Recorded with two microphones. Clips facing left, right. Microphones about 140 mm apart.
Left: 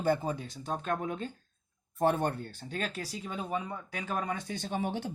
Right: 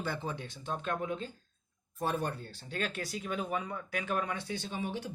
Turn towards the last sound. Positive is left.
turn(degrees=55)  # may be behind; listen again after turning